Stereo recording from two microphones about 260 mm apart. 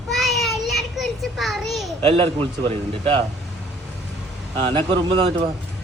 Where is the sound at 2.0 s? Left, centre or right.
Right.